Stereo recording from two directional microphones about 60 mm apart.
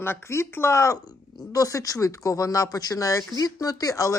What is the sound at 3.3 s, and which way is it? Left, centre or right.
Speech, left.